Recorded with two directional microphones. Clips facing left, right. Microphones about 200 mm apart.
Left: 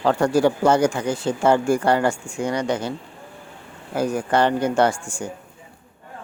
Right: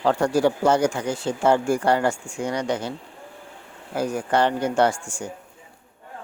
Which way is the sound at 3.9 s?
60° left (ahead or behind).